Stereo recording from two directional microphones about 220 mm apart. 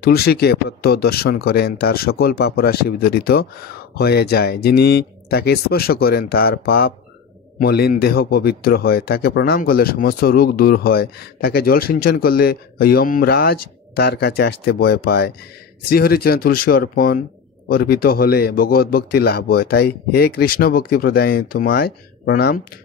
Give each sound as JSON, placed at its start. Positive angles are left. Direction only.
{"t": 0.0, "sound": "a man's voice", "side_deg": 45}